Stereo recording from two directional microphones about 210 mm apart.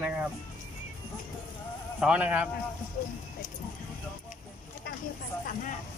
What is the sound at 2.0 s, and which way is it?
Speech, 5° right (ahead or behind).